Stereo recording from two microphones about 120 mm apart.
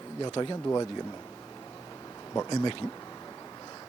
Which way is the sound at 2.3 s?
30° left (ahead or behind).